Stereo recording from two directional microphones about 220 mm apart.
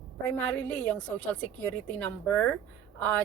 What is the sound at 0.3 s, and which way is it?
Speech, 5° left (ahead or behind).